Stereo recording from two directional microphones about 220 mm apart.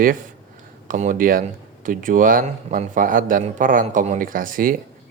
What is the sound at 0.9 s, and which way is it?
Speech, 35° right (ahead or behind).